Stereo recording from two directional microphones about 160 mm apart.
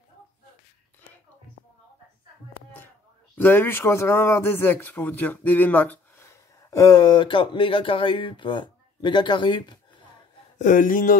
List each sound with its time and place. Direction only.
3.3 s speech: 10° left (ahead or behind); by 10.0 s 30° left (ahead or behind)
10.6 s speech: 55° left (ahead or behind)